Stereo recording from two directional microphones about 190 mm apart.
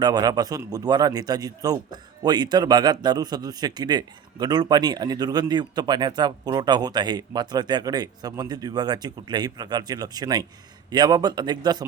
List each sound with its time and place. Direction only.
0.0 s a man's voice: 20° right (ahead or behind)